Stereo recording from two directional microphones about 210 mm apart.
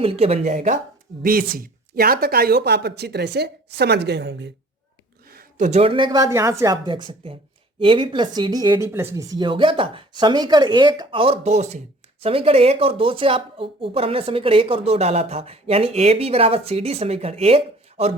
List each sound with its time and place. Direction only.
0.0 s speech: 30° right (ahead or behind); by 4.5 s 55° right (ahead or behind)
5.3 s speech: 40° right (ahead or behind)